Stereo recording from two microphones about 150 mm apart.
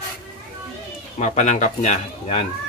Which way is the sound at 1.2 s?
55° left (ahead or behind).